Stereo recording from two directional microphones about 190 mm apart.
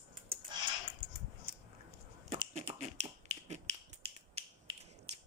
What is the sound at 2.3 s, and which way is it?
Finger snapping, 35° right (ahead or behind).